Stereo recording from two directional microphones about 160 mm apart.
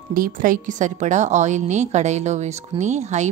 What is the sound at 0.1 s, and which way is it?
Speech, 60° right (ahead or behind).